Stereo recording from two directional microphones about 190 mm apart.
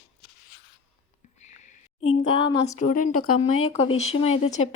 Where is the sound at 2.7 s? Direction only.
45° left (ahead or behind).